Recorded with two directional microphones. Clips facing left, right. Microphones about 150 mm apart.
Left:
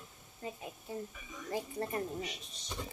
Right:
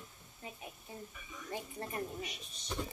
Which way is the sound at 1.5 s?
35° left (ahead or behind).